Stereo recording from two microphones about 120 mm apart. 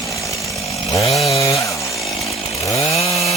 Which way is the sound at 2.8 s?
60° left (ahead or behind).